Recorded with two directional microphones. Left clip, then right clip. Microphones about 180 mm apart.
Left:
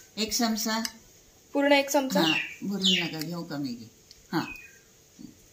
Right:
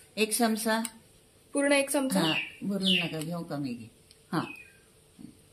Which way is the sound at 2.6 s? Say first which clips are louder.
Left 2 dB; 40° right (ahead or behind).